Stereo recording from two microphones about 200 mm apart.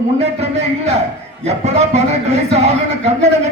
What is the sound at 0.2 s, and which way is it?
Speech, 35° right (ahead or behind).